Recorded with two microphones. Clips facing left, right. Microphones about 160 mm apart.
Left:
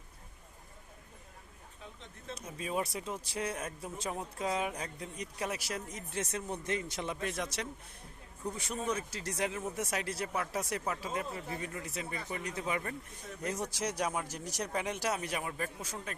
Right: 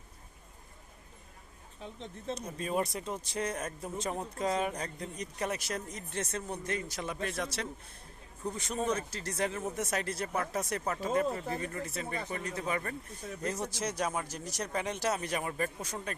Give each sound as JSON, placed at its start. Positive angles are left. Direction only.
{"t": 1.8, "sound": "speech", "side_deg": -30}
{"t": 2.3, "sound": "speech", "side_deg": 5}
{"t": 6.7, "sound": "speech", "side_deg": 20}
{"t": 8.9, "sound": "speech", "side_deg": 10}
{"t": 11.0, "sound": "speech", "side_deg": -45}
{"t": 11.6, "sound": "speech", "side_deg": 10}